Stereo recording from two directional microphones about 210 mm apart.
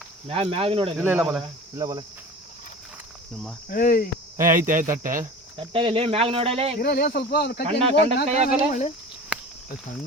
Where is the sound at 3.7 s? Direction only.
45° left (ahead or behind).